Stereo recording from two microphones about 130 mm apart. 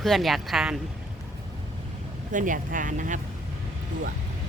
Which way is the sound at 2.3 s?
90° right.